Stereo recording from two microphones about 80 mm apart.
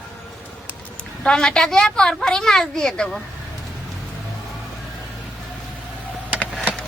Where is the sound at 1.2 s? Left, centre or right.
Centre.